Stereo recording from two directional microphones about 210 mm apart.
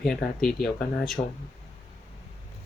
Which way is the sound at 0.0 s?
Centre (ahead or behind).